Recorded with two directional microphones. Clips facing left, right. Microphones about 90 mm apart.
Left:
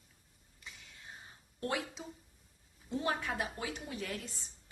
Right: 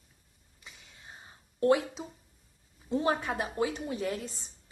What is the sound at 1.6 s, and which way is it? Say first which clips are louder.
A woman's voice: right 12 dB; 30° right (ahead or behind).